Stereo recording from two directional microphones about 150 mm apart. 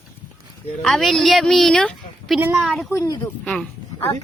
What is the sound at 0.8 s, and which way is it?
A woman's voice, centre (ahead or behind).